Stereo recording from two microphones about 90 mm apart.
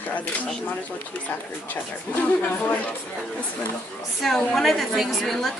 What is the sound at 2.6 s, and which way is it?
Speech, 15° left (ahead or behind).